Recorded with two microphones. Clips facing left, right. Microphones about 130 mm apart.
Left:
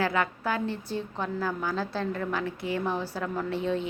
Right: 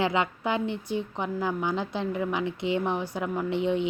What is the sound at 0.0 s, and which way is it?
A woman's voice, 20° right (ahead or behind).